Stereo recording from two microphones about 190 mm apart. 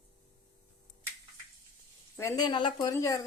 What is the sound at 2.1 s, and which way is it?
A woman's voice, 15° left (ahead or behind).